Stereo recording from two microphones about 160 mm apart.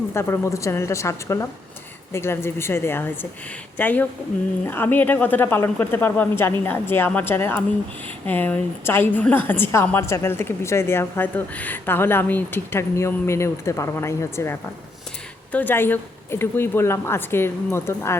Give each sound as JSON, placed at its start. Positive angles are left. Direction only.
{"t": 0.1, "sound": "a woman's voice", "side_deg": 15}